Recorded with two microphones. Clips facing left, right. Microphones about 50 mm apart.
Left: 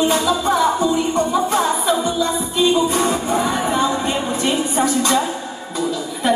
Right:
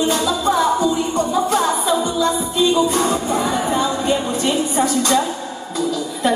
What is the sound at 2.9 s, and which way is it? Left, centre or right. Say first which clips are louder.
Music: even; left.